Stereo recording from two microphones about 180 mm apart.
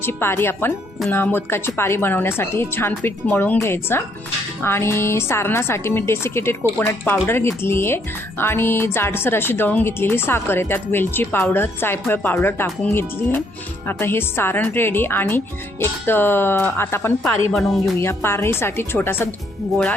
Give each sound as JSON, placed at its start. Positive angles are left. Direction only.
{"t": 0.0, "sound": "a woman's voice", "side_deg": 10}
{"t": 17.5, "sound": "speech", "side_deg": 0}
{"t": 18.0, "sound": "a woman's voice", "side_deg": 15}